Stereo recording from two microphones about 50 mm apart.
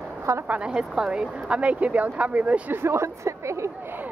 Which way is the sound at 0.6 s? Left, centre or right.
Centre.